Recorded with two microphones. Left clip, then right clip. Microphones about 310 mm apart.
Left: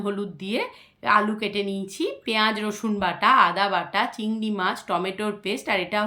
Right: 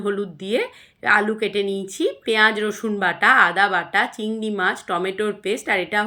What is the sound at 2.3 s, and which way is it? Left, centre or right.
Speech, centre.